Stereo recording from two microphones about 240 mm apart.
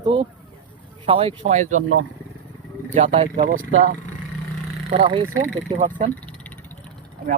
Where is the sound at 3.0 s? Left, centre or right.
Right.